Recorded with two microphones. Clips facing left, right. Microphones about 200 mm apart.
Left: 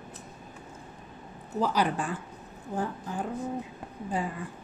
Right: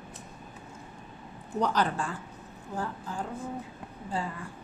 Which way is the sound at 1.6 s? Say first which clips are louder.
Left 1 dB; 10° left (ahead or behind).